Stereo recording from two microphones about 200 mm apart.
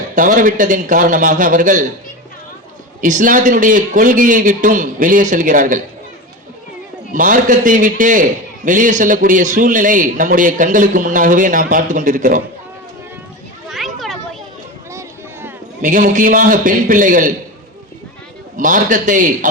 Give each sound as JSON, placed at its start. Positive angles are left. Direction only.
{"t": 0.2, "sound": "a man's voice", "side_deg": -45}
{"t": 3.0, "sound": "a man's voice", "side_deg": -40}
{"t": 7.1, "sound": "a man's voice", "side_deg": -40}
{"t": 13.7, "sound": "children playing", "side_deg": 0}
{"t": 14.8, "sound": "a sound", "side_deg": -10}
{"t": 15.8, "sound": "a man's voice", "side_deg": -40}
{"t": 18.5, "sound": "a man's voice", "side_deg": -40}